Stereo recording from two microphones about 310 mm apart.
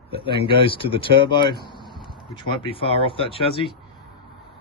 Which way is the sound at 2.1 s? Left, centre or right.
Centre.